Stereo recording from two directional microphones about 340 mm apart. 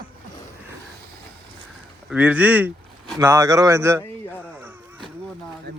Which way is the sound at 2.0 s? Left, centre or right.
Centre.